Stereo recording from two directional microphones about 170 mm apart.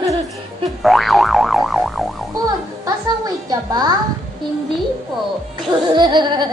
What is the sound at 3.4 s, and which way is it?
Speech, 25° right (ahead or behind).